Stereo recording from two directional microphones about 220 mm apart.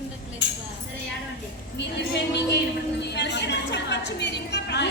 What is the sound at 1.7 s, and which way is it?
A woman's voice, 50° left (ahead or behind).